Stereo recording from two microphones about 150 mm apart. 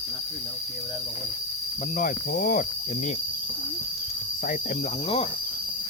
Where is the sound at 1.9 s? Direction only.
75° left (ahead or behind).